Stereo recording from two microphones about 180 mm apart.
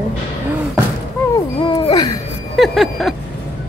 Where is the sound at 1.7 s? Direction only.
25° left (ahead or behind).